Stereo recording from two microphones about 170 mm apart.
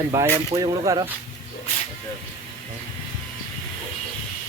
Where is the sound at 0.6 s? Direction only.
20° right (ahead or behind).